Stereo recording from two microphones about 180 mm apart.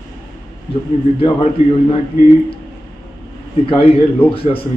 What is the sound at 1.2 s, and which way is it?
Speech, 30° left (ahead or behind).